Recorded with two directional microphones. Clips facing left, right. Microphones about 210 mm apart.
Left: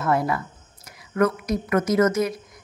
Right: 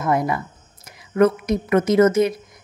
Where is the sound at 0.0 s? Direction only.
15° right (ahead or behind).